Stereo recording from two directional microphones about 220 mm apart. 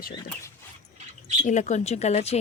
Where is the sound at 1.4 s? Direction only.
35° left (ahead or behind).